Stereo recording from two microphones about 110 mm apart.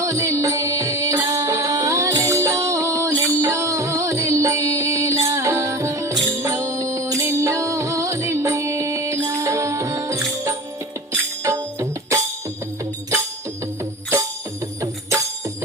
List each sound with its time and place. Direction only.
0.0 s music: 25° right (ahead or behind)
3.1 s music: 15° left (ahead or behind)
3.3 s music: 25° right (ahead or behind)